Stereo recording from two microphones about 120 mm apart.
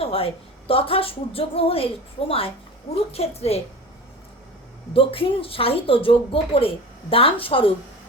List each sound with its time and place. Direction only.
0.0 s a sound: 50° left (ahead or behind)
0.7 s a woman's voice: 50° left (ahead or behind)
4.9 s a woman's voice: 50° left (ahead or behind)